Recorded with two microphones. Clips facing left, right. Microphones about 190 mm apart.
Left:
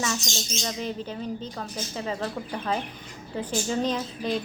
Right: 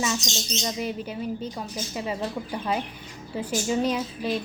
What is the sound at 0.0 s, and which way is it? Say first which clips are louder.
Speech: right 2 dB; 15° right (ahead or behind).